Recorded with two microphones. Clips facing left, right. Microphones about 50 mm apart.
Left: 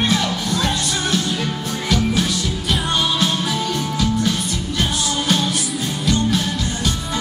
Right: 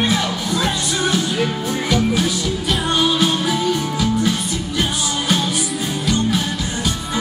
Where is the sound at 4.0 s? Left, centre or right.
Centre.